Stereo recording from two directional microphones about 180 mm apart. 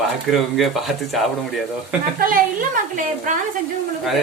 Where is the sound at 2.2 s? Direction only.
50° right (ahead or behind).